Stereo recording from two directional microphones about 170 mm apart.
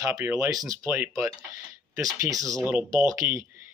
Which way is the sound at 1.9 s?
20° right (ahead or behind).